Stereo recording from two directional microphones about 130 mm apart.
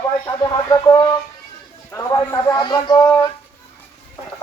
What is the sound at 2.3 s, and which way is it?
Speech, 30° left (ahead or behind).